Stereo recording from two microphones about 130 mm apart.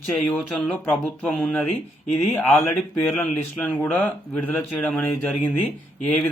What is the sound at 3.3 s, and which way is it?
Speech, 10° left (ahead or behind).